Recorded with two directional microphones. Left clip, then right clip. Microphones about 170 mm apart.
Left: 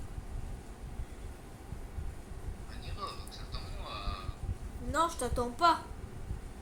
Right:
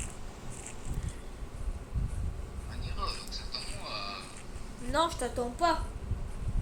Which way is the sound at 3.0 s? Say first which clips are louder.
Right 4 dB; 25° left (ahead or behind).